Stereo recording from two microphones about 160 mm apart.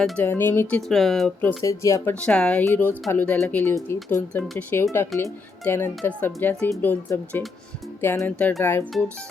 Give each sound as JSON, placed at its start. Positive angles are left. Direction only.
{"t": 0.0, "sound": "speech", "side_deg": 10}
{"t": 0.8, "sound": "speech", "side_deg": 0}
{"t": 1.4, "sound": "speech", "side_deg": 15}
{"t": 2.1, "sound": "speech", "side_deg": 5}